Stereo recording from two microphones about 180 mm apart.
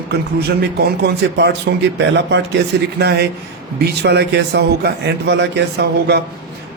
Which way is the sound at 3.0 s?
65° right (ahead or behind).